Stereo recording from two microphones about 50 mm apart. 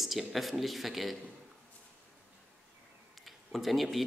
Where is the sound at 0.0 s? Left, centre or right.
Centre.